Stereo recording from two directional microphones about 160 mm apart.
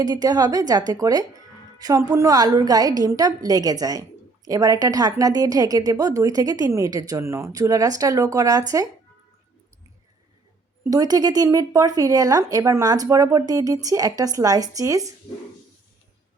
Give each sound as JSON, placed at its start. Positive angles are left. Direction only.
{"t": 0.0, "sound": "a woman's voice", "side_deg": -25}
{"t": 10.8, "sound": "a woman's voice", "side_deg": -25}